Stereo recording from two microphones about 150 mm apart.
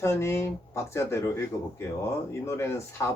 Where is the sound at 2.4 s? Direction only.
20° left (ahead or behind).